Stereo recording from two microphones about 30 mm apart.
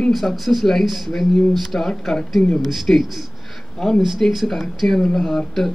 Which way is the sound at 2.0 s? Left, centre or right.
Centre.